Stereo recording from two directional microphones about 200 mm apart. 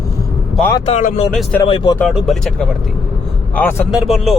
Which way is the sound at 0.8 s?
35° left (ahead or behind).